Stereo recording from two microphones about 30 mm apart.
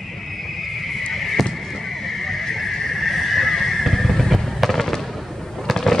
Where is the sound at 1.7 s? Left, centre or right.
Centre.